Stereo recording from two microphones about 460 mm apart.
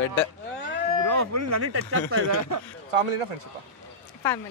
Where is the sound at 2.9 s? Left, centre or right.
Right.